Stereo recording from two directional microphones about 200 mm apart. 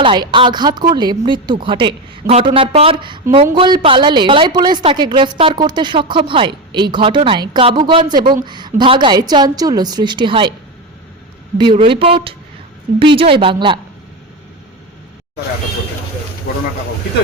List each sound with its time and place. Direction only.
0.0 s a woman's voice: 25° right (ahead or behind)
11.5 s a woman's voice: 25° right (ahead or behind)
16.5 s a sound: 50° left (ahead or behind)